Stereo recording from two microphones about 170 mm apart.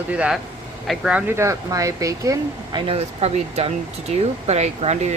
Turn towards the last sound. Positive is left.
turn(degrees=-40)  # may be behind; listen again after turning